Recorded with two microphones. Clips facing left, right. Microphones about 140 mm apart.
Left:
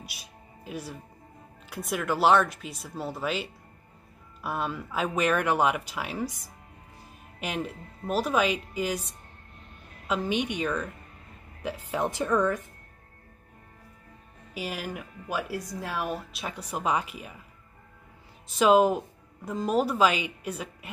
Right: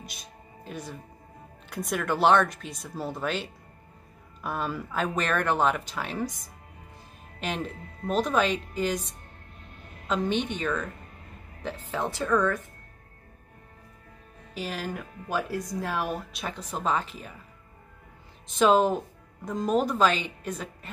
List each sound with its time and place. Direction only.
0.0 s music: 5° left (ahead or behind)
1.7 s speech: centre (ahead or behind)
7.3 s speech: 5° left (ahead or behind)
10.0 s speech: 5° left (ahead or behind)
14.5 s speech: 10° left (ahead or behind)
18.5 s speech: 5° left (ahead or behind)